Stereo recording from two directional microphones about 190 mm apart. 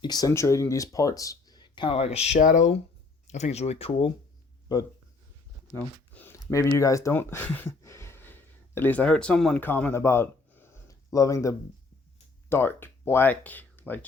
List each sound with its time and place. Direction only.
0.0 s speech: 20° left (ahead or behind)
5.7 s speech: 10° left (ahead or behind)